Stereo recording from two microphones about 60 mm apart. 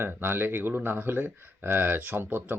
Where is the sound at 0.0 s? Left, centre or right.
Right.